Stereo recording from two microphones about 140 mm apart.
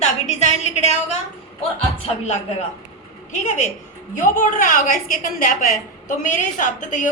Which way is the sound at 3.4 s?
60° left (ahead or behind).